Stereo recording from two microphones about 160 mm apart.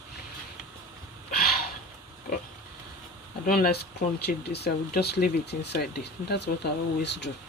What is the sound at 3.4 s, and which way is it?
Speech, 70° left (ahead or behind).